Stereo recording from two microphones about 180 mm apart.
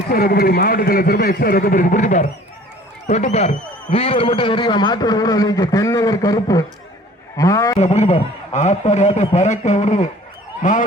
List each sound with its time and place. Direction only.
0.1 s a man's voice: 60° left (ahead or behind); by 7.8 s 20° left (ahead or behind)
7.8 s a man's voice: 35° left (ahead or behind)